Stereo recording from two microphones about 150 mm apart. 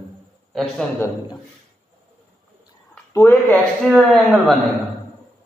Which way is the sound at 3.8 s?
Centre (ahead or behind).